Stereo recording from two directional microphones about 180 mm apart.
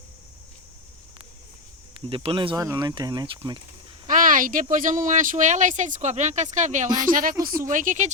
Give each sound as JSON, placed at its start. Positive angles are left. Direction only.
{"t": 2.0, "sound": "speech", "side_deg": -30}
{"t": 4.0, "sound": "speech", "side_deg": -50}